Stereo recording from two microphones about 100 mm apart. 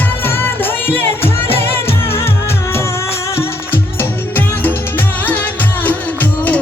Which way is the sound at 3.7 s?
20° left (ahead or behind).